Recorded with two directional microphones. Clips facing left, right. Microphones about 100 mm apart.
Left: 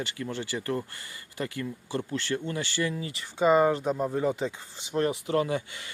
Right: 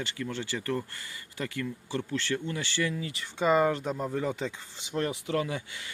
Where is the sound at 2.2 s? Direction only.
30° left (ahead or behind).